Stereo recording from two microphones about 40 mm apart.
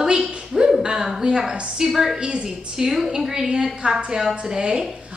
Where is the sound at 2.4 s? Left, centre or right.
Centre.